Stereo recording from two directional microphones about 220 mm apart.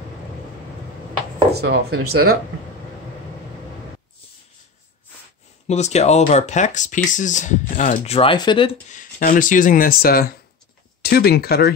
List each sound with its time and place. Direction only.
1.5 s speech: 45° right (ahead or behind)
5.7 s speech: 30° left (ahead or behind)
8.9 s speech: 35° left (ahead or behind)